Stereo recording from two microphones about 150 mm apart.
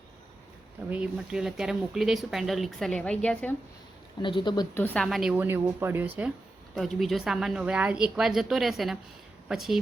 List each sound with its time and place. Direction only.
0.9 s speech: 10° right (ahead or behind); by 3.5 s 5° left (ahead or behind)
4.2 s speech: 30° left (ahead or behind)
4.7 s a woman's voice: 10° left (ahead or behind)
5.0 s a woman's voice: 5° right (ahead or behind)
6.7 s speech: centre (ahead or behind)